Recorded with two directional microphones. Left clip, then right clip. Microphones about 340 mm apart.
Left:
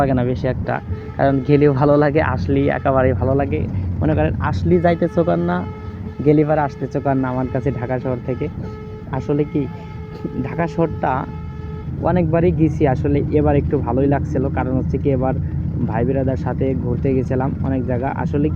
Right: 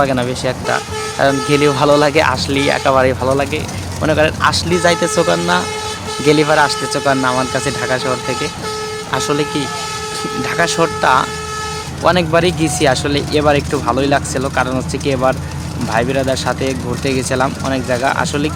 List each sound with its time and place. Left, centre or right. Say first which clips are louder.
0.0 s speech: right 3 dB; centre
10.6 s speech: right 6 dB; centre
16.6 s speech: right 2 dB; right
17.3 s speech: right 6 dB; centre